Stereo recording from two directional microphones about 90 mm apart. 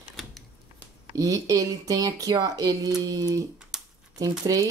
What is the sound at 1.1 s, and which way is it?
Speech, 40° right (ahead or behind).